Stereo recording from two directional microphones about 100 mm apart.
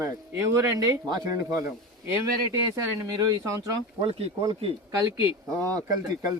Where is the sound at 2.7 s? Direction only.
35° right (ahead or behind).